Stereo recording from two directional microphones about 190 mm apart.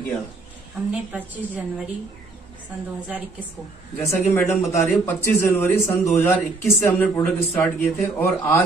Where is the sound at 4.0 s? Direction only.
15° left (ahead or behind).